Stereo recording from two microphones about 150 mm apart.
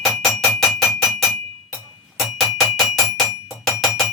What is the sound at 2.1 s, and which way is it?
Music, centre (ahead or behind).